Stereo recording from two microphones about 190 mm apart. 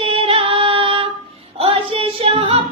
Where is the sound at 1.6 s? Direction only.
25° right (ahead or behind).